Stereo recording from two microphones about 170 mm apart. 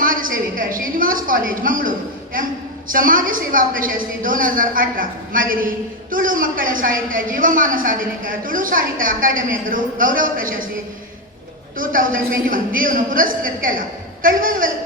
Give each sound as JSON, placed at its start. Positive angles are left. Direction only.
{"t": 0.0, "sound": "a sound", "side_deg": -55}
{"t": 2.9, "sound": "a woman's voice", "side_deg": -55}
{"t": 11.8, "sound": "a woman's voice", "side_deg": -55}